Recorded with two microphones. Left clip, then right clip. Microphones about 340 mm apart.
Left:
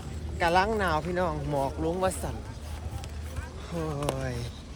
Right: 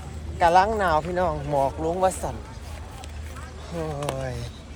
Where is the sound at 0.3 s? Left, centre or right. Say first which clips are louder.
Right 6 dB; centre.